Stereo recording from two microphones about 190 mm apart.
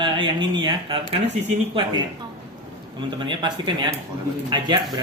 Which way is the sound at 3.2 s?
25° right (ahead or behind).